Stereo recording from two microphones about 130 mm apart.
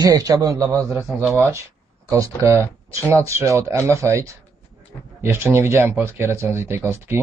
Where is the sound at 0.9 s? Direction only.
10° right (ahead or behind).